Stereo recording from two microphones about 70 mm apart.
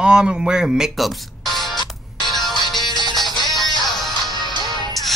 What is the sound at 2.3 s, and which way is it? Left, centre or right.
Music, centre.